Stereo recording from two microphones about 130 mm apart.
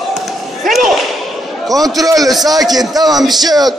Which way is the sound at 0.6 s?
Centre (ahead or behind).